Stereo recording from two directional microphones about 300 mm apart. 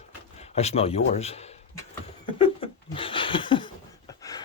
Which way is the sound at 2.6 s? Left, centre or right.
Centre.